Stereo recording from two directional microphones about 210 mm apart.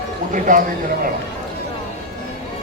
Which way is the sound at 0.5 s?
40° right (ahead or behind).